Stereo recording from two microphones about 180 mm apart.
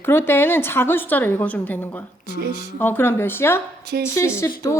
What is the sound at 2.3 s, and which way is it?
Speech, 60° right (ahead or behind).